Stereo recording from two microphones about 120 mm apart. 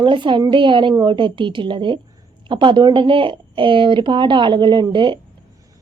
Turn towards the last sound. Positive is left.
turn(degrees=-40)  # may be behind; listen again after turning